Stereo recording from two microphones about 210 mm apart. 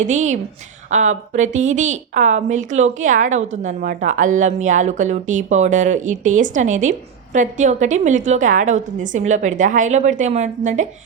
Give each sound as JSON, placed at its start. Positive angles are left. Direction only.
{"t": 0.0, "sound": "a woman's voice", "side_deg": -35}